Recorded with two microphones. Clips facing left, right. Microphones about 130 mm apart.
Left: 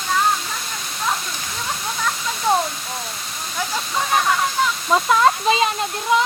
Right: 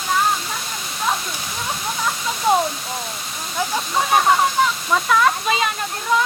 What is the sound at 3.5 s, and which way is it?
Speech, 15° right (ahead or behind).